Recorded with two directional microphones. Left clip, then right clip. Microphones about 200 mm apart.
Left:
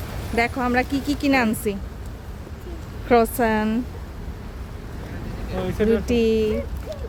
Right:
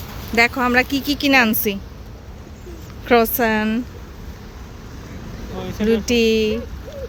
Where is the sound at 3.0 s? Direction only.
5° left (ahead or behind).